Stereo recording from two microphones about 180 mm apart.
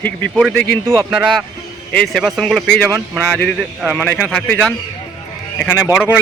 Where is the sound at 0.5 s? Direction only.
70° left (ahead or behind).